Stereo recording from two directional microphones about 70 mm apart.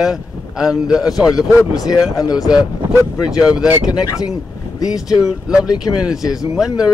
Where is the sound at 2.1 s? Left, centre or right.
Left.